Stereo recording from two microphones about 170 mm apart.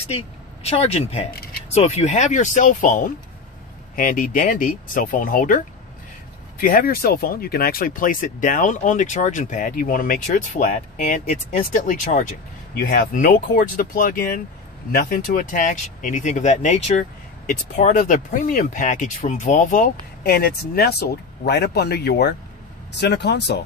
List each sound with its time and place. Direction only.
0.7 s speech: 35° left (ahead or behind); by 5.6 s 55° left (ahead or behind)
6.6 s speech: 55° left (ahead or behind)
12.7 s speech: 60° left (ahead or behind); by 23.6 s 85° left